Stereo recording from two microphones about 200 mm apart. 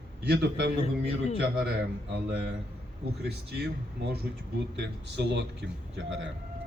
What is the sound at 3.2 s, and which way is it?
A man's voice, 55° right (ahead or behind).